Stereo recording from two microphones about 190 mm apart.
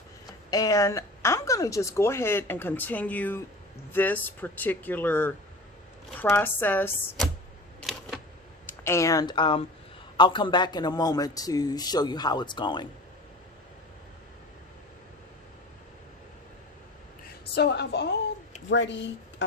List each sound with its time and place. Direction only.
0.5 s a woman's voice: 20° left (ahead or behind)
7.8 s camera: centre (ahead or behind)
8.6 s a man's voice: 15° left (ahead or behind)
17.2 s a woman's voice: 60° left (ahead or behind)